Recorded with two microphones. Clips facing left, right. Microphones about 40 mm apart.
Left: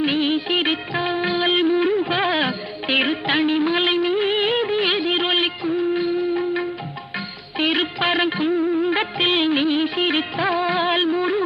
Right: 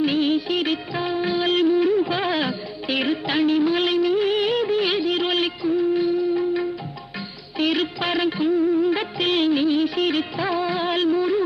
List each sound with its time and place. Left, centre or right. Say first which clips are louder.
0.0 s music of bollywood: even; left